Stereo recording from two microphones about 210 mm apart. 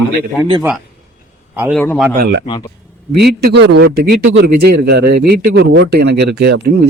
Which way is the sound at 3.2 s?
50° right (ahead or behind).